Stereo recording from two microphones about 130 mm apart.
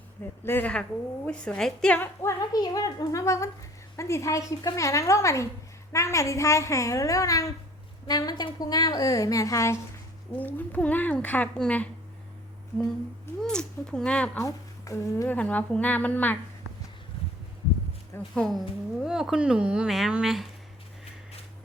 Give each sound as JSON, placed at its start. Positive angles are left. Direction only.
{"t": 0.4, "sound": "a woman's voice", "side_deg": 15}
{"t": 2.2, "sound": "a woman's voice", "side_deg": 30}
{"t": 10.3, "sound": "a woman's voice", "side_deg": 15}
{"t": 13.4, "sound": "a woman's voice", "side_deg": 5}
{"t": 14.4, "sound": "a woman's voice", "side_deg": 25}
{"t": 15.4, "sound": "a woman's voice", "side_deg": 10}
{"t": 18.3, "sound": "speech", "side_deg": 5}